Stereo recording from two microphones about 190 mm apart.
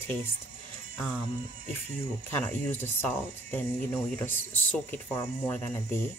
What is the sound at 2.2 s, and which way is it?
Speech, 10° left (ahead or behind).